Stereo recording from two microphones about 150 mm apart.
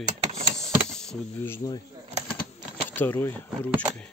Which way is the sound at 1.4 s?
25° left (ahead or behind).